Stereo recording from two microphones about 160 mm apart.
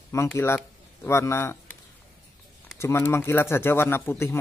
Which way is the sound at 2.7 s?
15° left (ahead or behind).